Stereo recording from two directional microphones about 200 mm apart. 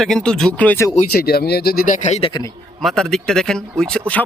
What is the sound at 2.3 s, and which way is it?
Speech, 20° left (ahead or behind).